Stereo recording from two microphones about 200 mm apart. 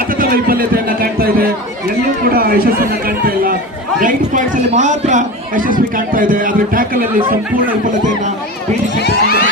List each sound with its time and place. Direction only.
0.2 s a man's voice: 45° right (ahead or behind)
9.0 s speech: 55° left (ahead or behind)